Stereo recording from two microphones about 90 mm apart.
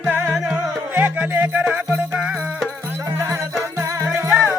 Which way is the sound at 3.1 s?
30° right (ahead or behind).